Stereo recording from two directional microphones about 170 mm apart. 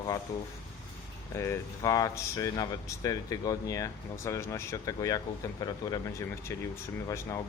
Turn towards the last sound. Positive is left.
turn(degrees=20)  # may be behind; listen again after turning